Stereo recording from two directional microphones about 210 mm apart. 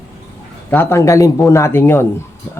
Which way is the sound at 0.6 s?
10° left (ahead or behind).